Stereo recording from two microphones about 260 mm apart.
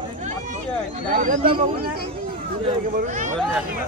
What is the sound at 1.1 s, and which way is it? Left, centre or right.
Speech, right.